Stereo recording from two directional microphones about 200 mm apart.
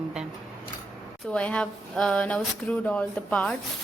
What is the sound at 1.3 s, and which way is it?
Speech, 5° left (ahead or behind).